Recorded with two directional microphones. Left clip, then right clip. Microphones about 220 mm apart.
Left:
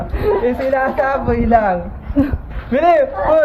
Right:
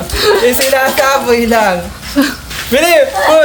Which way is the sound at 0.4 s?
90° right.